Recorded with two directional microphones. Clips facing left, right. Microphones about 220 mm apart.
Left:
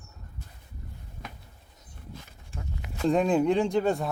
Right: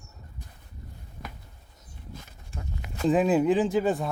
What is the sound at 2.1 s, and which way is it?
Walk, 45° right (ahead or behind).